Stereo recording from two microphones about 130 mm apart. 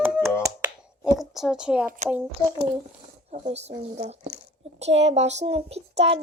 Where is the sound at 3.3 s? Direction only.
60° right (ahead or behind).